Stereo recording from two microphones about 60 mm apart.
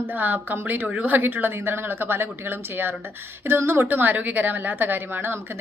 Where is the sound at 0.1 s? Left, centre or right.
Right.